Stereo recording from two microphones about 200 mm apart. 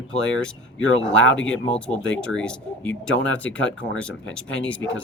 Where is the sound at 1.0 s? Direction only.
70° left (ahead or behind).